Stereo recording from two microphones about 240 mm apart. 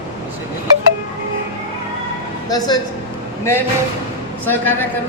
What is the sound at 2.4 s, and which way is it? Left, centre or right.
A man's voice, centre.